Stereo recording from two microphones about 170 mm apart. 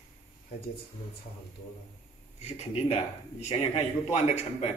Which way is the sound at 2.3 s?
40° left (ahead or behind).